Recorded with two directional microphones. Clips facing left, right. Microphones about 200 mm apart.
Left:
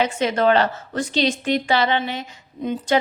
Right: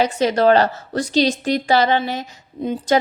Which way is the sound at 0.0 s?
40° right (ahead or behind).